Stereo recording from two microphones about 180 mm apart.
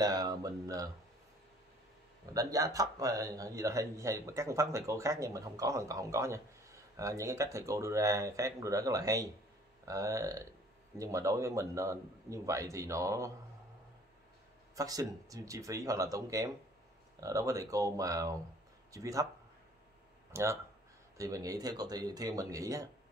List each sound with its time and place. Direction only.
0.0 s speech: 20° right (ahead or behind)
2.3 s speech: 20° right (ahead or behind)
14.8 s speech: 20° right (ahead or behind)
20.3 s speech: 15° right (ahead or behind)